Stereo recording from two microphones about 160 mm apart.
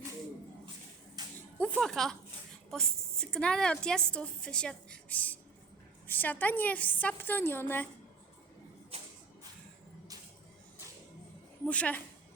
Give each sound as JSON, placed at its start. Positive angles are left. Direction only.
{"t": 1.2, "sound": "a sound", "side_deg": -25}
{"t": 1.7, "sound": "a woman's voice", "side_deg": 0}
{"t": 11.6, "sound": "speech", "side_deg": 10}